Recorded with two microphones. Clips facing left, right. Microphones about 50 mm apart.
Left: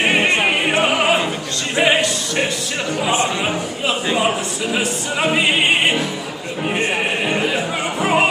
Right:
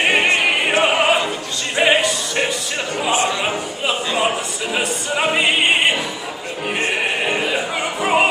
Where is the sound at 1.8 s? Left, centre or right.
Centre.